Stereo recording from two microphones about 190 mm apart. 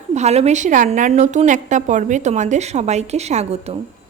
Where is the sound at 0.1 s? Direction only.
35° right (ahead or behind).